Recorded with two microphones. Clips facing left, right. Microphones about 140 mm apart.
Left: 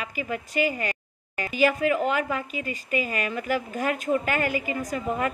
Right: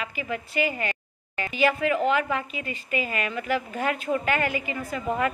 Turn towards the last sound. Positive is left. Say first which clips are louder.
# even
turn(degrees=40)  # may be behind; listen again after turning